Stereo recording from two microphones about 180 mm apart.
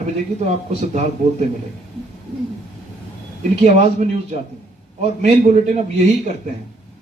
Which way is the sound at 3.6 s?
40° right (ahead or behind).